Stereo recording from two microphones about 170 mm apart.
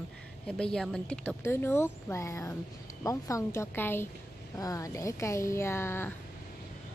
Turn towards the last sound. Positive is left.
turn(degrees=15)  # may be behind; listen again after turning